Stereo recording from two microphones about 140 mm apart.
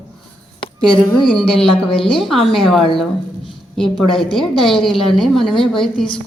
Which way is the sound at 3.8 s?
5° left (ahead or behind).